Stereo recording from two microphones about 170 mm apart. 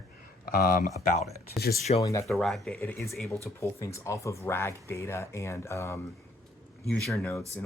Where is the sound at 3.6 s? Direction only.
15° left (ahead or behind).